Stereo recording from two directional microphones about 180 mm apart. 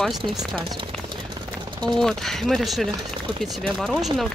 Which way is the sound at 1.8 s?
Centre (ahead or behind).